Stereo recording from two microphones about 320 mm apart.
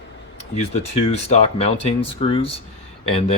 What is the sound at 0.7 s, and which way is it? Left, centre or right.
Speech, centre.